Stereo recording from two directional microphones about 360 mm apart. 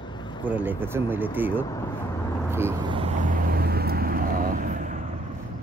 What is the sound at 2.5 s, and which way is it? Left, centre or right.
Vehicle, centre.